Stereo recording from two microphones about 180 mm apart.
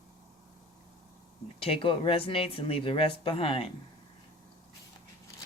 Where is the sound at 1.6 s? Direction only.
30° left (ahead or behind).